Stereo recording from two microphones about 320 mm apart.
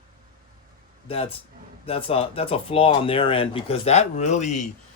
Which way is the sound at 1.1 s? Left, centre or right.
Centre.